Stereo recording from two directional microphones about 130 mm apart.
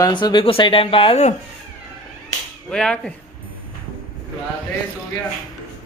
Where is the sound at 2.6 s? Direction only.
5° left (ahead or behind).